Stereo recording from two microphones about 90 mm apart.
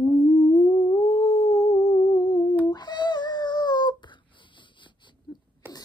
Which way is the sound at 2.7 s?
50° left (ahead or behind).